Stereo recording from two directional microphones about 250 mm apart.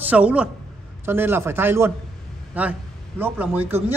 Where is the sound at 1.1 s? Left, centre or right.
Centre.